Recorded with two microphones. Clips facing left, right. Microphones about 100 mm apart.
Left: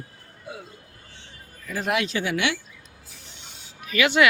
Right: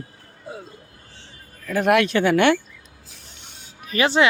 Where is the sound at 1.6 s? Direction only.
60° right (ahead or behind).